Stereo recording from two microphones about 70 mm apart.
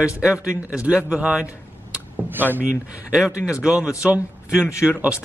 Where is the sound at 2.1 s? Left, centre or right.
Right.